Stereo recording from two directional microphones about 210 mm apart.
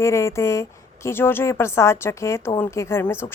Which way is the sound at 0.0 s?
15° left (ahead or behind).